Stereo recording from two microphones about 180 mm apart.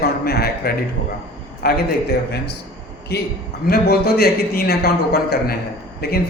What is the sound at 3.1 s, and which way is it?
A man's voice, 65° left (ahead or behind).